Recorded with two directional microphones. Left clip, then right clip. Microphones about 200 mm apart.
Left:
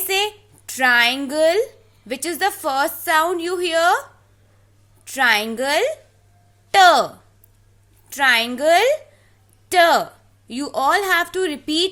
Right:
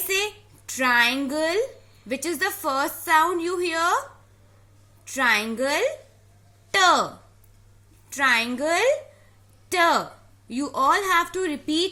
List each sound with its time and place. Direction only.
0.1 s a sound: 35° left (ahead or behind)
2.0 s a woman's voice: 35° left (ahead or behind)
5.0 s a woman's voice: 40° left (ahead or behind)
8.1 s a woman's voice: 40° left (ahead or behind)